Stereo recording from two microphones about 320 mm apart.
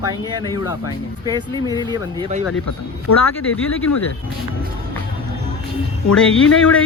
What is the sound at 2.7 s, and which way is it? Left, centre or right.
Speech, left.